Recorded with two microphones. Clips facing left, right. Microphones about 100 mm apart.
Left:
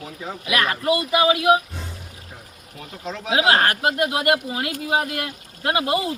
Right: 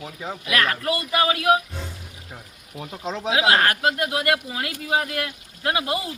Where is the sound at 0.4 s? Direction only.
20° left (ahead or behind).